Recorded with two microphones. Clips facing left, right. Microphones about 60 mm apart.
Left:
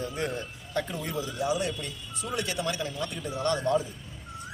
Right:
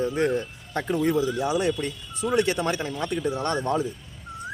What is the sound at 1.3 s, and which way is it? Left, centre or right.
Speech, right.